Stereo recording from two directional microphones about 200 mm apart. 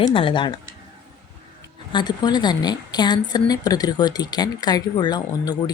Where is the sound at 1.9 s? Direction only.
20° left (ahead or behind).